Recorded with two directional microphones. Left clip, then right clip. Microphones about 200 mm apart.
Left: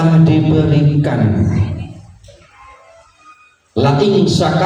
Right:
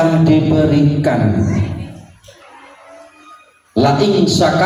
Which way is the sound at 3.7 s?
55° right (ahead or behind).